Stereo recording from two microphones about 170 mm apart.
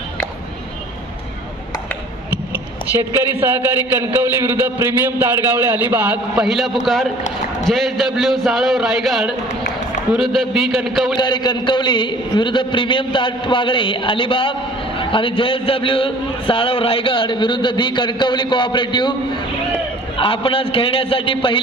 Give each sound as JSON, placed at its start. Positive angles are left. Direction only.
{"t": 3.3, "sound": "a man's voice", "side_deg": -10}
{"t": 11.1, "sound": "a man's voice", "side_deg": 25}
{"t": 20.2, "sound": "a man's voice", "side_deg": 30}